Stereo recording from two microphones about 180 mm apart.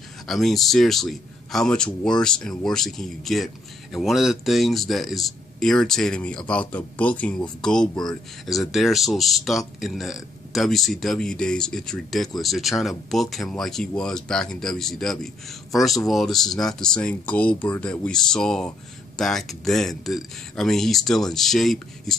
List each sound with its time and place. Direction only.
0.3 s speech: centre (ahead or behind)